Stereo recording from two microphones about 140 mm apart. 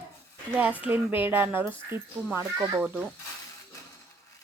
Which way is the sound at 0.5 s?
10° right (ahead or behind).